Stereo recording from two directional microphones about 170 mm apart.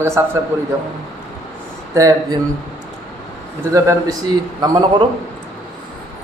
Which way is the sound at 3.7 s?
20° right (ahead or behind).